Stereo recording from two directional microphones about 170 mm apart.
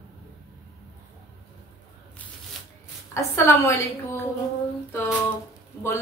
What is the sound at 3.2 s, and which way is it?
Speech, 15° left (ahead or behind).